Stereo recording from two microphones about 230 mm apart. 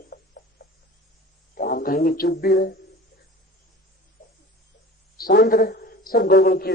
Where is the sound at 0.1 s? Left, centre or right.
Left.